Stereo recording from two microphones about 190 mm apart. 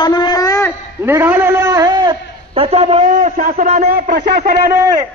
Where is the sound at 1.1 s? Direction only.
15° right (ahead or behind); by 4.7 s 45° right (ahead or behind).